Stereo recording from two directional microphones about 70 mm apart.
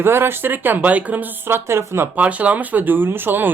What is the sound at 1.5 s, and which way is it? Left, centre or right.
Speech, right.